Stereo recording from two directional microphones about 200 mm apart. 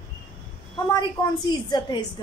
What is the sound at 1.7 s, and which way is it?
Speech, 20° left (ahead or behind).